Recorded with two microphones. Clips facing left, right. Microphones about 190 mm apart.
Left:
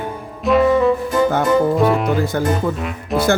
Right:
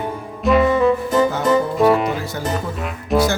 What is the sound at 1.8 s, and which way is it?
Music, centre (ahead or behind).